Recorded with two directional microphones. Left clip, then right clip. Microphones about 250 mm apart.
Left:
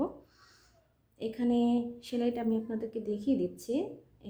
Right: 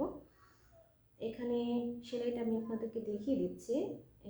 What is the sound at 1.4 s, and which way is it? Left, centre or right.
A woman's voice, left.